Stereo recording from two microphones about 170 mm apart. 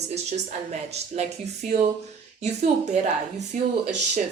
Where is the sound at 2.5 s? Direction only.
40° right (ahead or behind).